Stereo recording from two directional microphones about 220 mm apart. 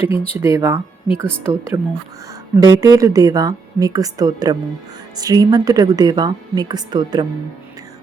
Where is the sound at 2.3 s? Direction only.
15° right (ahead or behind).